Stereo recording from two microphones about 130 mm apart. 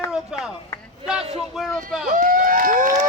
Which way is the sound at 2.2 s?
90° right.